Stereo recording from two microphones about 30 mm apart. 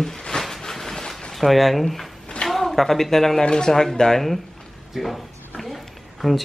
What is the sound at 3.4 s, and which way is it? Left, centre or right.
Speech, left.